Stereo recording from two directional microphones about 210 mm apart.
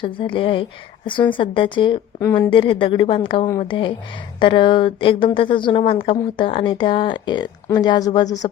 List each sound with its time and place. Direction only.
0.0 s a woman's voice: 25° left (ahead or behind)